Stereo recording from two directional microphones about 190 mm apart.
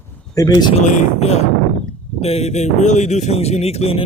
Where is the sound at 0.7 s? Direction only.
40° left (ahead or behind).